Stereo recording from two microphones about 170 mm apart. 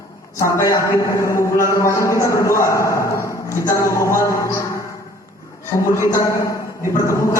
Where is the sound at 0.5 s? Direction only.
20° left (ahead or behind).